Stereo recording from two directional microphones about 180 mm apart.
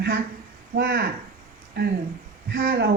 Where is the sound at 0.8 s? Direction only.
60° right (ahead or behind).